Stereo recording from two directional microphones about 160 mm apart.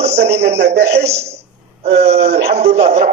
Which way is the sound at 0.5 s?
90° right.